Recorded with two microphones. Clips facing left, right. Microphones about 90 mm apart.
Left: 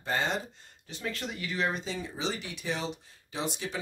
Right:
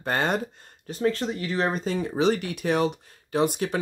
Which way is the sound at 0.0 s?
55° right (ahead or behind).